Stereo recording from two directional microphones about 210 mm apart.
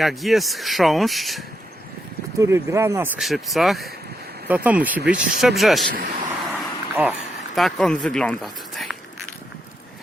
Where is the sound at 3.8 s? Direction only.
50° right (ahead or behind).